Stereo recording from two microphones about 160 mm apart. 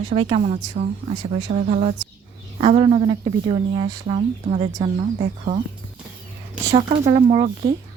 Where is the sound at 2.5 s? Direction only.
35° right (ahead or behind).